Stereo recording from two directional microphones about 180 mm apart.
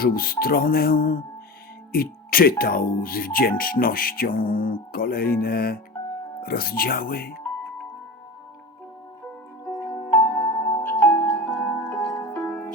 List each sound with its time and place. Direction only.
0.0 s speech: 55° left (ahead or behind)
10.1 s music: 15° left (ahead or behind)
11.0 s music: 10° left (ahead or behind)
11.7 s music: 20° left (ahead or behind)